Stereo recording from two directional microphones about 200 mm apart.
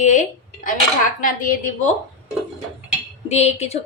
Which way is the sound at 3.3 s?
35° left (ahead or behind).